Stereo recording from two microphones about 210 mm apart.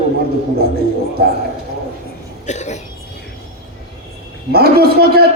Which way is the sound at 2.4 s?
35° left (ahead or behind).